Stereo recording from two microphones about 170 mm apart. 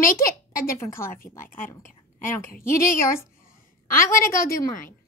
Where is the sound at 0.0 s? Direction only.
55° left (ahead or behind).